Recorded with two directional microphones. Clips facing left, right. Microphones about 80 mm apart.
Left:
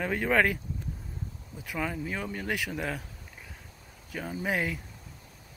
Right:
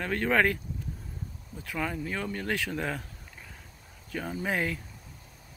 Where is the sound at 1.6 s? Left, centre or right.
Centre.